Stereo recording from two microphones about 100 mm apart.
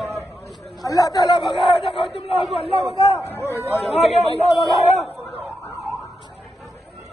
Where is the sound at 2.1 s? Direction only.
75° left (ahead or behind).